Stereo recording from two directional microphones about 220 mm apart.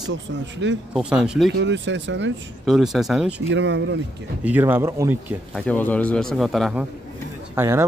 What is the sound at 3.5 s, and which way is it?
Speech, 55° right (ahead or behind).